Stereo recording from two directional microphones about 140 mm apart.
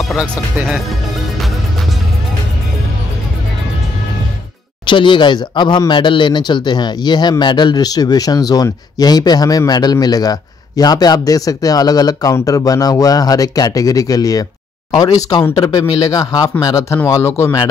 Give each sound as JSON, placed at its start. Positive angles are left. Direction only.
{"t": 0.1, "sound": "speech", "side_deg": 0}
{"t": 4.8, "sound": "speech", "side_deg": 35}
{"t": 15.5, "sound": "speech", "side_deg": 30}